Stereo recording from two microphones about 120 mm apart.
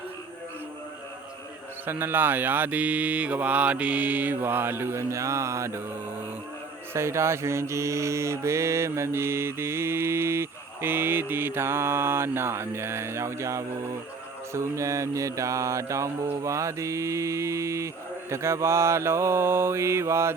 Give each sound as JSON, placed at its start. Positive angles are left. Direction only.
{"t": 1.9, "sound": "mantra", "side_deg": -20}
{"t": 6.9, "sound": "mantra", "side_deg": -25}